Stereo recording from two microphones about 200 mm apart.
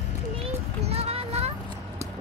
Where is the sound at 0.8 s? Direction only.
30° right (ahead or behind).